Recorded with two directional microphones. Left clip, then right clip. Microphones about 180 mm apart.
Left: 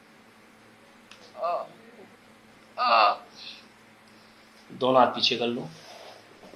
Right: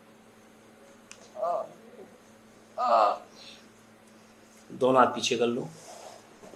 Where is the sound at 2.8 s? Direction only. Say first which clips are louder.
Left 2 dB; 30° right (ahead or behind).